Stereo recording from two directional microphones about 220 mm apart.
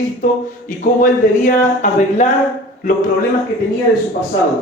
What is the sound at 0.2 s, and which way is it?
A man's voice, 35° left (ahead or behind).